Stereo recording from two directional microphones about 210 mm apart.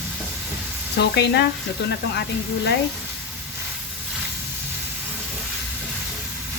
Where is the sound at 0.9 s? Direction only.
55° left (ahead or behind).